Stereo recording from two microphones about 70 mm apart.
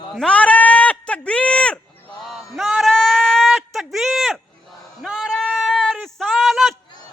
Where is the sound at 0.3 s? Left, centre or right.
Centre.